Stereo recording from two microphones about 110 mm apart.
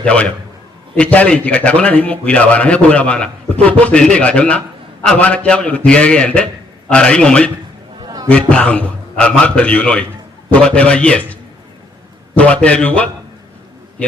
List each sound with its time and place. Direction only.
0.0 s a man's voice: 10° left (ahead or behind)
8.0 s chatter: 35° right (ahead or behind)
8.3 s a man's voice: 10° left (ahead or behind)